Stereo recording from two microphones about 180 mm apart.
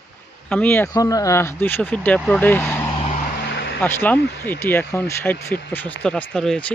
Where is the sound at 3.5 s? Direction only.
80° left.